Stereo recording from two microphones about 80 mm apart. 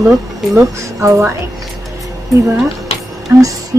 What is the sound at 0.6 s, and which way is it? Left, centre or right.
Speech, right.